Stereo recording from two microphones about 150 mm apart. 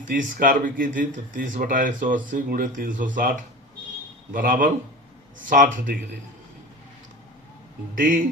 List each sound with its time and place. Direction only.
0.0 s speech: 60° right (ahead or behind)
7.9 s speech: 65° right (ahead or behind)